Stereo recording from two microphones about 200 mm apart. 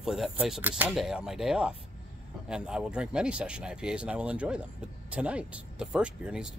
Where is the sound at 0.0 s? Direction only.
Centre (ahead or behind).